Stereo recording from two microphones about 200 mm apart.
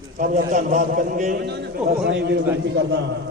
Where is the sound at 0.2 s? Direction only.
40° right (ahead or behind).